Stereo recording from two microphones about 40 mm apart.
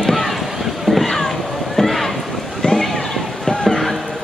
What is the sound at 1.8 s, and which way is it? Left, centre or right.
Rowboat, centre.